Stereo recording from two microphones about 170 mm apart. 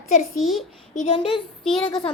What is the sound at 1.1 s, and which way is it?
Speech, 30° left (ahead or behind).